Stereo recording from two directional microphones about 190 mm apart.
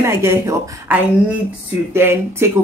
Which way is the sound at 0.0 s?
15° right (ahead or behind).